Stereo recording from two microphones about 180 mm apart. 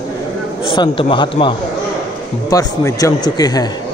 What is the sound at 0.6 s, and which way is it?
A man's voice, 30° left (ahead or behind).